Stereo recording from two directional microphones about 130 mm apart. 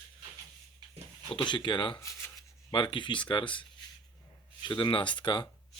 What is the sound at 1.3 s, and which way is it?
Speech, 35° left (ahead or behind).